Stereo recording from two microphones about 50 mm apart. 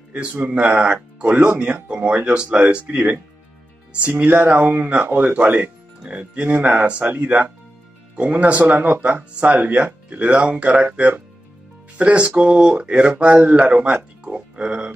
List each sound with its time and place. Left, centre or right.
0.1 s speech: right
1.2 s speech: right
4.2 s speech: right
8.5 s speech: right
13.9 s speech: right